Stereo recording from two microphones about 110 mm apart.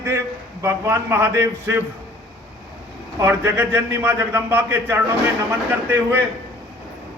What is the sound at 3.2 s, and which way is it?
A man's voice, 25° right (ahead or behind).